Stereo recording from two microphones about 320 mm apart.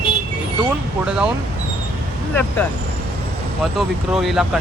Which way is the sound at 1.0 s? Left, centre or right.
Centre.